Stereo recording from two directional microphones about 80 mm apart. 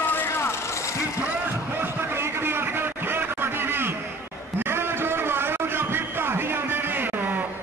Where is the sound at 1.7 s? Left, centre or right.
Right.